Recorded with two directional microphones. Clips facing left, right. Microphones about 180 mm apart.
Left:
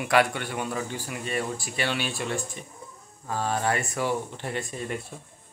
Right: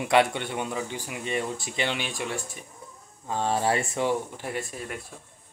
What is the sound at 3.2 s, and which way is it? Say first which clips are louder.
Speech: right 2 dB; 25° right (ahead or behind).